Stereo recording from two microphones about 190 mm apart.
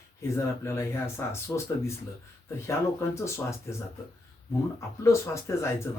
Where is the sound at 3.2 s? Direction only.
15° left (ahead or behind).